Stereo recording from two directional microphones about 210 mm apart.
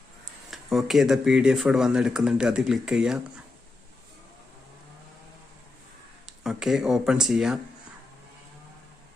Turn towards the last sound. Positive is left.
turn(degrees=0)  # may be behind; listen again after turning